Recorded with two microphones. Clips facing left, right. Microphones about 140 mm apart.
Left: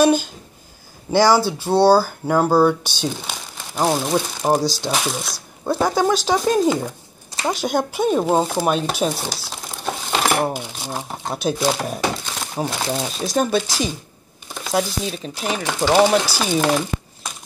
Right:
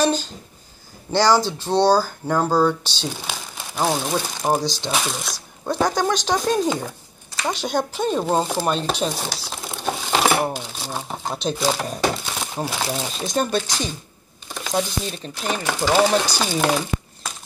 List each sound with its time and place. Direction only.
0.0 s speech: 10° left (ahead or behind)
3.1 s speech: centre (ahead or behind)
9.8 s coin: 5° right (ahead or behind)
10.5 s speech: 10° left (ahead or behind)
15.6 s speech: 15° left (ahead or behind)
16.0 s speech: 5° left (ahead or behind)